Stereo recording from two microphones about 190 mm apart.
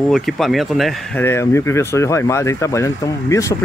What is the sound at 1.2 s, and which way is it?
Speech, 15° left (ahead or behind).